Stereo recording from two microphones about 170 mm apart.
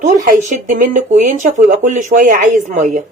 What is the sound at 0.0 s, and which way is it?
A woman's voice, 45° right (ahead or behind).